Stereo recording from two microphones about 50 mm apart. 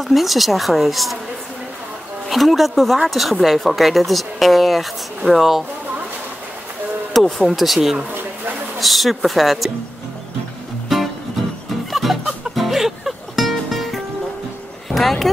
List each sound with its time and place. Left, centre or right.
0.0 s speech: centre
2.2 s speech: centre
7.2 s speech: centre
10.9 s music: centre
14.9 s a sound: centre